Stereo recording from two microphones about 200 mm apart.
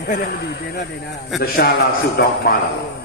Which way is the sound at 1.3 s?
50° left (ahead or behind).